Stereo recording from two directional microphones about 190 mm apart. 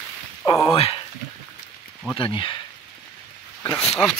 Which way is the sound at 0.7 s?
30° left (ahead or behind).